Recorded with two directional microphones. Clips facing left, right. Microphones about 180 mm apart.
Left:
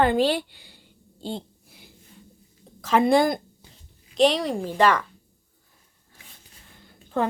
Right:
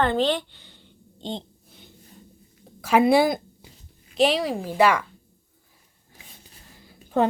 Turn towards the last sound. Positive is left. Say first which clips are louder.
# right 1 dB
turn(degrees=-5)  # may be behind; listen again after turning